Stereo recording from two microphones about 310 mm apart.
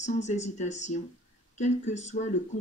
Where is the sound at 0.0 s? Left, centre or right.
Left.